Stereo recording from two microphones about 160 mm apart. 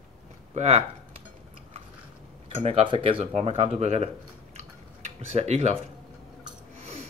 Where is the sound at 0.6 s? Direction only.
45° right (ahead or behind).